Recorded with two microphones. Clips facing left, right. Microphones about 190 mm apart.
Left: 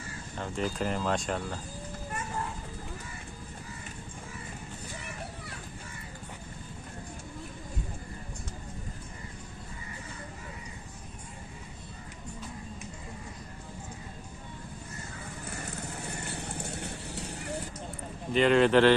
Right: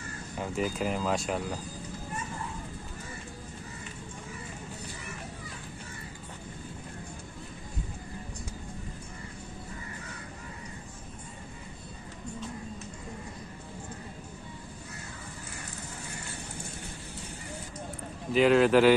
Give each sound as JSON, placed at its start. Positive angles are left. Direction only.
{"t": 0.4, "sound": "speech", "side_deg": -5}
{"t": 16.8, "sound": "clip-clop", "side_deg": 70}
{"t": 18.3, "sound": "speech", "side_deg": -5}